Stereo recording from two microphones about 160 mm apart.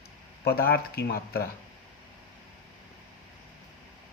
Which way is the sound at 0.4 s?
70° left (ahead or behind).